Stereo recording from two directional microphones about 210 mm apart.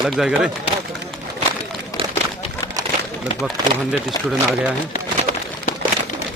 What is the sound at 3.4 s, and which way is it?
Speech, centre (ahead or behind).